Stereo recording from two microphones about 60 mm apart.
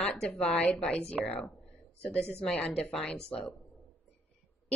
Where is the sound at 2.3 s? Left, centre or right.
Centre.